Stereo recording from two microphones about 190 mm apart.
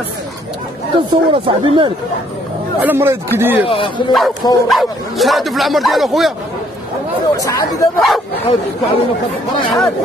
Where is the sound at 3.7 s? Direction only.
30° left (ahead or behind).